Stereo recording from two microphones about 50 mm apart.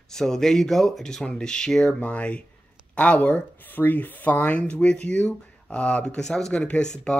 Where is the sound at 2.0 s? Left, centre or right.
Left.